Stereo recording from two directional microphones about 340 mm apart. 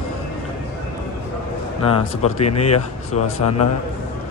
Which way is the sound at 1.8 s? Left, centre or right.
Centre.